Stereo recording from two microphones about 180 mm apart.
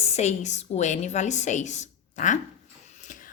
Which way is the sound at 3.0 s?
45° left (ahead or behind).